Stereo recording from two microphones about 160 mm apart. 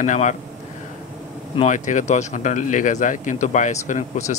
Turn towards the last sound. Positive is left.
turn(degrees=45)  # may be behind; listen again after turning